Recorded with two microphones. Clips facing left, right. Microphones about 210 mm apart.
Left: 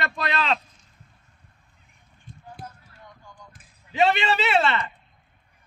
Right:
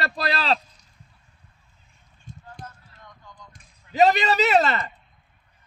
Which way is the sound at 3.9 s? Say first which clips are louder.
Right 3 dB; 40° right (ahead or behind).